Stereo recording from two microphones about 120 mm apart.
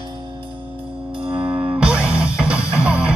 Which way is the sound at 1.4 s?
15° right (ahead or behind).